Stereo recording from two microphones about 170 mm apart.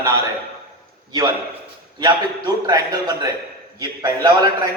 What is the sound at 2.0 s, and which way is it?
A man's voice, 25° right (ahead or behind).